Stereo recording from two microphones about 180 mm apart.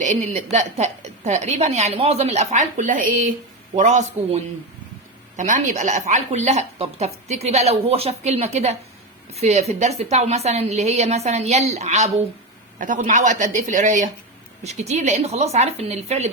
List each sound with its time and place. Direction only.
0.0 s a woman's voice: 40° right (ahead or behind)